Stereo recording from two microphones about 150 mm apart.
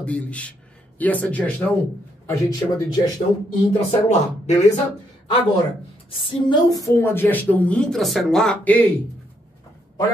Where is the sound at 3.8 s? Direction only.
50° left (ahead or behind).